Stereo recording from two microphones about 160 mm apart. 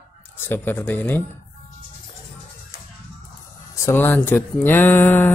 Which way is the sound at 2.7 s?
65° left (ahead or behind).